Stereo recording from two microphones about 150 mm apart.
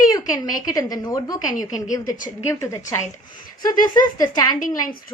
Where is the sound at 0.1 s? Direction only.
25° left (ahead or behind).